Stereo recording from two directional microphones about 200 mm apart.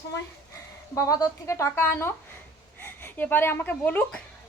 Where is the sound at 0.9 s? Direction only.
15° left (ahead or behind).